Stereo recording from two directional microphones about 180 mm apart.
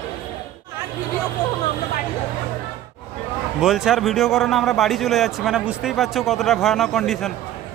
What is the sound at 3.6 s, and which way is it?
A man's voice, centre (ahead or behind).